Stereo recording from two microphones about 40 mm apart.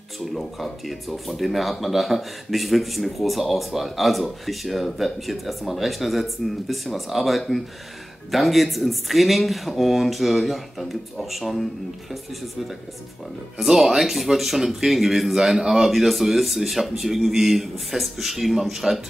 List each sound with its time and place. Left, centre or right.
0.2 s speech: centre
13.6 s speech: centre